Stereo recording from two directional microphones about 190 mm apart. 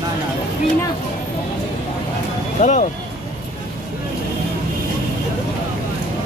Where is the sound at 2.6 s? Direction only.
40° left (ahead or behind).